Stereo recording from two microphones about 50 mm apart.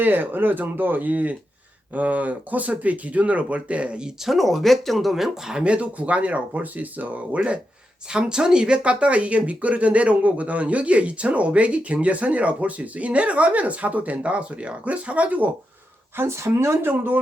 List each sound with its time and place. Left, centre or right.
0.0 s speech: right
4.3 s speech: centre
5.6 s speech: right
8.1 s speech: centre
16.1 s speech: right